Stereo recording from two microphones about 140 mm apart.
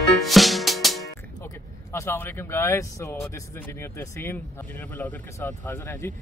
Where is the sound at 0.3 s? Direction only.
Centre (ahead or behind).